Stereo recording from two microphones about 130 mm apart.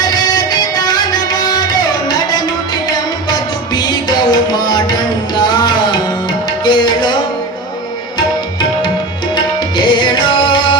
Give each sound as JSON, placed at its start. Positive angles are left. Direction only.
{"t": 0.1, "sound": "music", "side_deg": 30}
{"t": 5.4, "sound": "tabla", "side_deg": 35}
{"t": 9.3, "sound": "tabla", "side_deg": 35}